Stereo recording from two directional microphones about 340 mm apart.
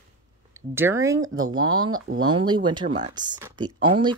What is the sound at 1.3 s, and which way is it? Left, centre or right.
Speech, right.